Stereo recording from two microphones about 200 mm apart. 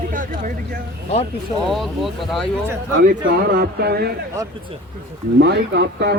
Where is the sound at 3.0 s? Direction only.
45° right (ahead or behind).